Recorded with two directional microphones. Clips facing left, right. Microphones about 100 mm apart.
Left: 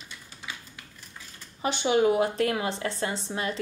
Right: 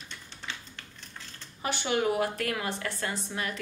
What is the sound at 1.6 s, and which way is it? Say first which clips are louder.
A woman's voice: left 5 dB; 20° left (ahead or behind).